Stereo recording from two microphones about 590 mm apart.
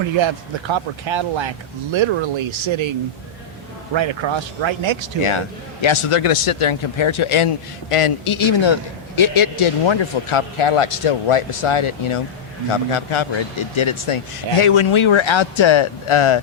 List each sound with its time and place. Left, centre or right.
0.2 s speech: right
3.9 s speech: right
5.8 s speech: left